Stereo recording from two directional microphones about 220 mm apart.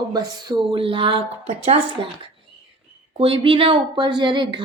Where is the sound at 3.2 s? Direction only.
25° right (ahead or behind).